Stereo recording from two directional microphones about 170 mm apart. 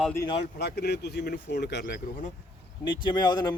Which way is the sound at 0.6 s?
75° left (ahead or behind).